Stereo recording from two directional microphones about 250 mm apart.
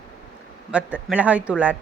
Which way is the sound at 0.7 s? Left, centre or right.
Centre.